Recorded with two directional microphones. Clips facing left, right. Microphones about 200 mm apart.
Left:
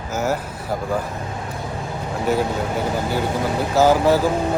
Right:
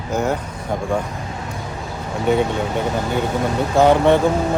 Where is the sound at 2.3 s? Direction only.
Centre (ahead or behind).